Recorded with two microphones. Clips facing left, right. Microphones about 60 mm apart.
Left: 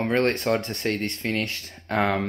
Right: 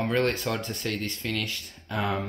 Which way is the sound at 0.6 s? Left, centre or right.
Left.